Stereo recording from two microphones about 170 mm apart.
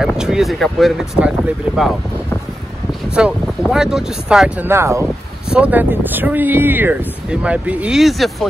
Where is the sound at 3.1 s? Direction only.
5° right (ahead or behind).